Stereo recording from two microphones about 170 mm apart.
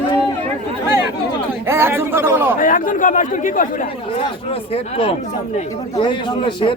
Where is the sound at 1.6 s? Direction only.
15° right (ahead or behind).